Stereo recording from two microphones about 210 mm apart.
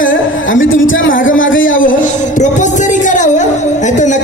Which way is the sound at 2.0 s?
35° left (ahead or behind).